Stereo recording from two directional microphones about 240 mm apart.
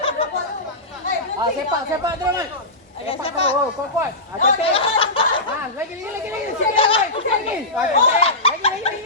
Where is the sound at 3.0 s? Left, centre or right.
Left.